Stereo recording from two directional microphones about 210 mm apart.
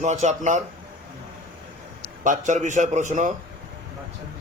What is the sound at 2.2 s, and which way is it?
A man's voice, 35° right (ahead or behind).